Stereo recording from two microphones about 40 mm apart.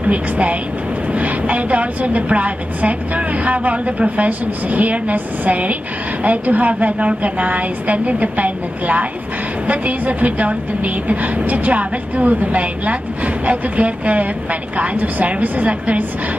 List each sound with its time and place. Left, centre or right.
0.0 s a woman's voice: right